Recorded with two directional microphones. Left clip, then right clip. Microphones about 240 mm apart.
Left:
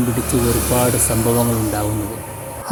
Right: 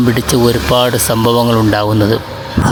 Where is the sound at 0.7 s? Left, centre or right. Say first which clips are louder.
Right 7 dB; right.